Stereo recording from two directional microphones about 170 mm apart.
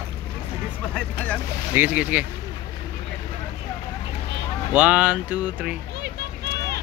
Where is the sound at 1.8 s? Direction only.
10° right (ahead or behind).